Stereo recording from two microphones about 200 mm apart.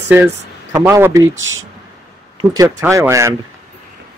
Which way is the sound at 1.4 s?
75° right (ahead or behind).